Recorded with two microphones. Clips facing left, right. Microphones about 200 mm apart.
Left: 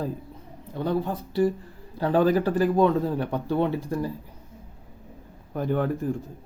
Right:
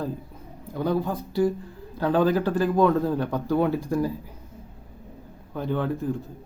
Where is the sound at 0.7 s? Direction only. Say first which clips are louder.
Right 1 dB; centre (ahead or behind).